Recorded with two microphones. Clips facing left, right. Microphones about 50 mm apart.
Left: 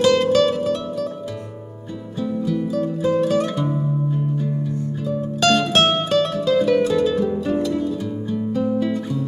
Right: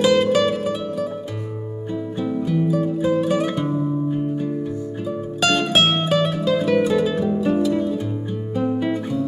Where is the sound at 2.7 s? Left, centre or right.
Centre.